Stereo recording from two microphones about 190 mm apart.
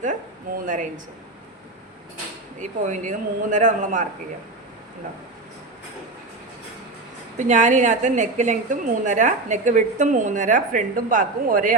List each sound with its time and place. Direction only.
0.6 s speech: 45° right (ahead or behind)
2.6 s a woman's voice: 40° right (ahead or behind)
7.3 s a woman's voice: 40° right (ahead or behind)